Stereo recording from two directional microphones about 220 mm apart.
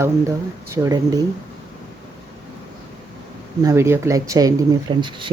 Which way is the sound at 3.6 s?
15° right (ahead or behind).